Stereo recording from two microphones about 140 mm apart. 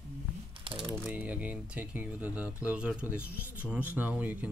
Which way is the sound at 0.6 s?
40° right (ahead or behind).